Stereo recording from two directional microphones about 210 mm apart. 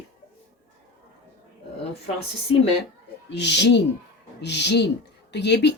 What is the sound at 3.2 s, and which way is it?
Speech, 55° left (ahead or behind).